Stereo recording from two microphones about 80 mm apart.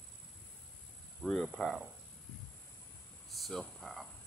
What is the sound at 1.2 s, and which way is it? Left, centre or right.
Speech, centre.